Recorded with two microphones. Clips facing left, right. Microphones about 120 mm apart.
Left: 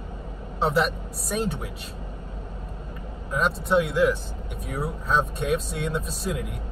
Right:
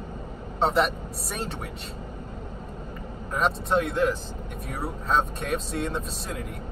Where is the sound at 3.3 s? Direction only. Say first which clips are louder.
Left 2 dB; centre (ahead or behind).